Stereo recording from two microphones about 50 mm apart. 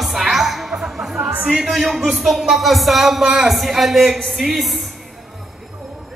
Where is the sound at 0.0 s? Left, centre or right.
Centre.